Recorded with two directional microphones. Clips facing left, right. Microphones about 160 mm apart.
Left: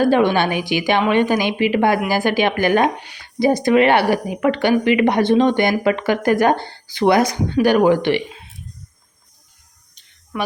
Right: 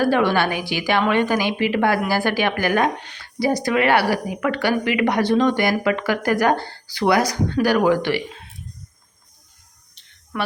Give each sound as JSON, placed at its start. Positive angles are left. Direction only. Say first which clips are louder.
{"t": 0.0, "sound": "speech", "louder": "left 3 dB", "side_deg": 20}
{"t": 3.0, "sound": "a sound", "louder": "left 3 dB", "side_deg": 10}
{"t": 3.4, "sound": "speech", "louder": "left 5 dB", "side_deg": 20}
{"t": 10.3, "sound": "speech", "louder": "left 2 dB", "side_deg": 5}